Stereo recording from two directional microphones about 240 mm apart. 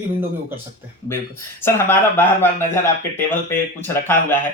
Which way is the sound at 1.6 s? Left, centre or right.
Centre.